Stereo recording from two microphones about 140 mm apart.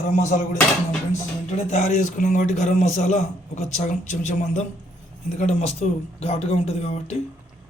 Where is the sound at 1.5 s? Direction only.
55° left (ahead or behind).